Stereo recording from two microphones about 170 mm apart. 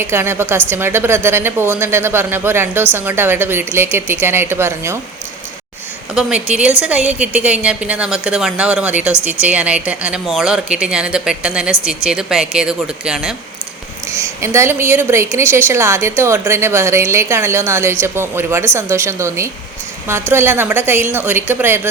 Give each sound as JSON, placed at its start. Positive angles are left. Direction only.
{"t": 0.0, "sound": "a woman's voice", "side_deg": -15}
{"t": 6.1, "sound": "a woman's voice", "side_deg": -5}
{"t": 14.1, "sound": "a woman's voice", "side_deg": -15}